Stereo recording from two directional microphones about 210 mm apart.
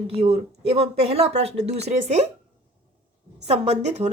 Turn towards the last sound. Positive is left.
turn(degrees=-30)  # may be behind; listen again after turning